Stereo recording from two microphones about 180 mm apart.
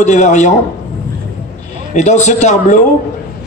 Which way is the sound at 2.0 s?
40° left (ahead or behind).